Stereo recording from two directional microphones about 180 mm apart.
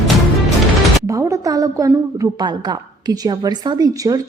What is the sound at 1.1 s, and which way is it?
A woman's voice, 20° right (ahead or behind).